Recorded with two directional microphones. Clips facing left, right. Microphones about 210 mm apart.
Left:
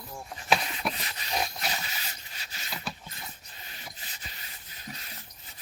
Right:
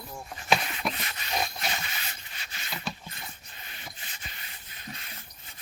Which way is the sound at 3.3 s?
40° left (ahead or behind).